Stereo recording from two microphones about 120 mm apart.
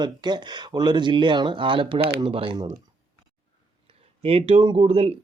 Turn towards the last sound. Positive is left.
turn(degrees=-55)  # may be behind; listen again after turning